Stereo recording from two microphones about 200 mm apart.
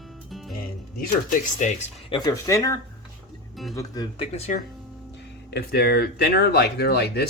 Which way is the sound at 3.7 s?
20° left (ahead or behind).